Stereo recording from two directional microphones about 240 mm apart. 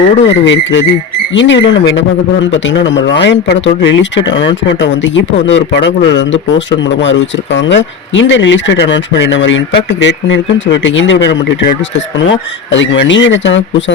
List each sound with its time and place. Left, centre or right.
0.3 s speech: left